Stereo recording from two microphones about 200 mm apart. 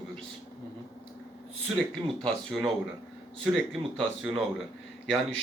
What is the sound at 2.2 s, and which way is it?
Speech, centre (ahead or behind).